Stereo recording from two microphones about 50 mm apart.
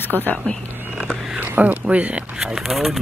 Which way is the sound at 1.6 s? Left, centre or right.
Right.